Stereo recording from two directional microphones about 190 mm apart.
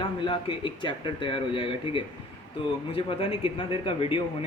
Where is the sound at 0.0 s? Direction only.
25° left (ahead or behind).